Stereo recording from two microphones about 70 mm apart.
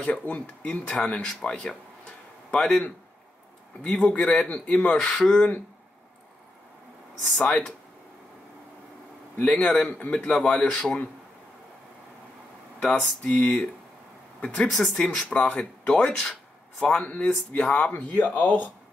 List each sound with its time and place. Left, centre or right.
0.0 s speech: centre
4.1 s speech: centre
7.3 s speech: centre
9.4 s speech: centre
12.8 s speech: centre